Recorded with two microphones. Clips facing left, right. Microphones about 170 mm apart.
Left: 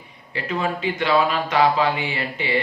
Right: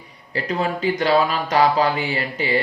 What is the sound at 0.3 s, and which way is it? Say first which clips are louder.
Speech: right 2 dB; 40° right (ahead or behind).